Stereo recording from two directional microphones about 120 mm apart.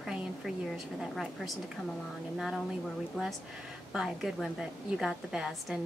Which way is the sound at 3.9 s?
5° right (ahead or behind).